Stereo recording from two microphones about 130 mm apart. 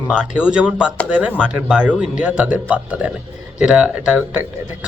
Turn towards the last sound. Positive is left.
turn(degrees=-10)  # may be behind; listen again after turning